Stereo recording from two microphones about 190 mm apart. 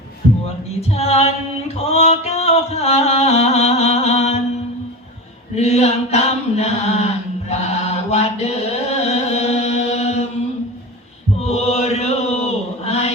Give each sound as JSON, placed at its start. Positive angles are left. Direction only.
{"t": 0.8, "sound": "a sound", "side_deg": 35}
{"t": 5.5, "sound": "mantra", "side_deg": 35}
{"t": 7.5, "sound": "chant", "side_deg": 35}
{"t": 11.3, "sound": "chant", "side_deg": 35}